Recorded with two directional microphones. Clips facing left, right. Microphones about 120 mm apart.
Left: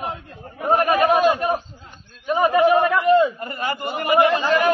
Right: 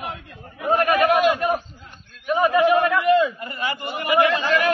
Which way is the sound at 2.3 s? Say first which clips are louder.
Left 1 dB; 35° left (ahead or behind).